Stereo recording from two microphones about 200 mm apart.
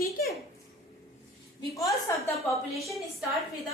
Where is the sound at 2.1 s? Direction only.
15° left (ahead or behind).